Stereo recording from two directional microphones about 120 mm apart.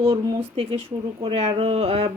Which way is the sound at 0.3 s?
50° right (ahead or behind).